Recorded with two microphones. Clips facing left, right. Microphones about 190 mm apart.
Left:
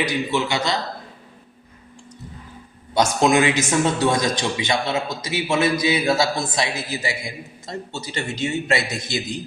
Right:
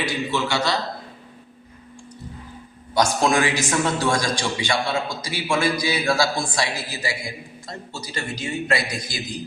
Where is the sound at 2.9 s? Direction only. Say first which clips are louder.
Left 2 dB; 20° left (ahead or behind).